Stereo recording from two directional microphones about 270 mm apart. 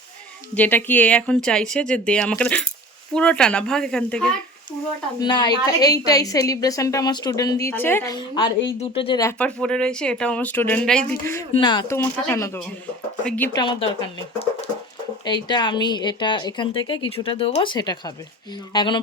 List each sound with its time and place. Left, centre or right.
0.5 s speech: centre
5.2 s a woman's voice: centre
15.2 s a woman's voice: centre